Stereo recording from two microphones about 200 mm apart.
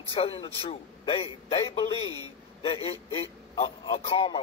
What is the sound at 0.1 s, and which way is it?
A man's voice, 25° left (ahead or behind).